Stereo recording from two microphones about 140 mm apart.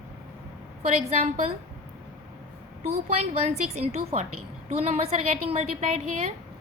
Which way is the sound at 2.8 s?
50° right (ahead or behind).